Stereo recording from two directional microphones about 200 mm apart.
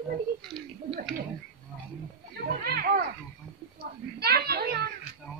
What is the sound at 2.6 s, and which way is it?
A woman's voice, 50° right (ahead or behind).